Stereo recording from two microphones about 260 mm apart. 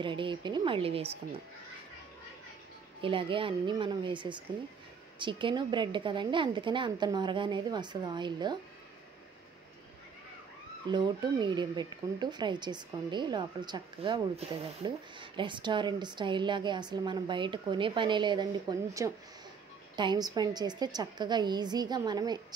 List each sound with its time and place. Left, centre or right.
0.0 s a woman's voice: centre
3.0 s a woman's voice: centre
10.9 s speech: centre